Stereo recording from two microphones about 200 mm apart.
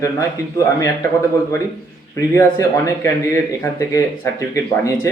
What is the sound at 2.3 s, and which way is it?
Speech, 15° left (ahead or behind).